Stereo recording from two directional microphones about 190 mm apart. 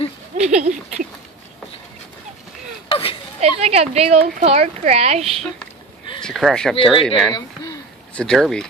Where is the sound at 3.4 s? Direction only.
35° right (ahead or behind).